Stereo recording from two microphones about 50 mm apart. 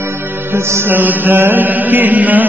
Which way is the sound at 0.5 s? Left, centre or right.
Right.